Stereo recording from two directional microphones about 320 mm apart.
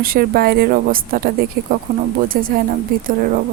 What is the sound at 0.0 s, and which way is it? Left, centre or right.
Speech, right.